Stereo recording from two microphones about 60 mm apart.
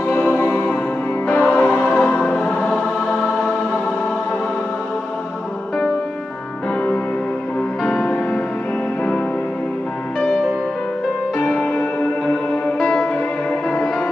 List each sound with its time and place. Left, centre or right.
0.3 s music: left
2.3 s choir: centre
7.8 s music: centre